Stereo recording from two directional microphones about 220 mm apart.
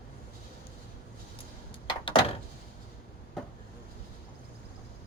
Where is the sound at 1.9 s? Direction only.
25° left (ahead or behind).